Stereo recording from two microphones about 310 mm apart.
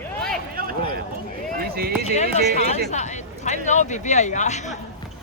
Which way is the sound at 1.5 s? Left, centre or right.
Right.